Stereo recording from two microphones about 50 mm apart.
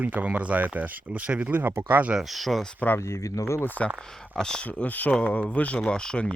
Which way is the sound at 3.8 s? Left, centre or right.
Centre.